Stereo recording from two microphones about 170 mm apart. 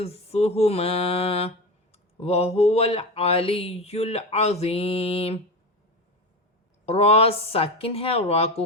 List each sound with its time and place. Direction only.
0.0 s mantra: 35° left (ahead or behind)
6.8 s mantra: 35° left (ahead or behind)